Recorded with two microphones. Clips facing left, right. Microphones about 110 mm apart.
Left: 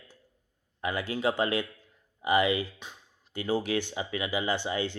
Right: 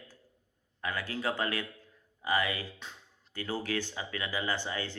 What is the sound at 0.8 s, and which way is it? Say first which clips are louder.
Speech: left 5 dB; 20° left (ahead or behind).